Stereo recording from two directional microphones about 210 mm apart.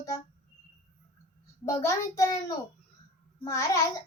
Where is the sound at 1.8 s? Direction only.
15° left (ahead or behind).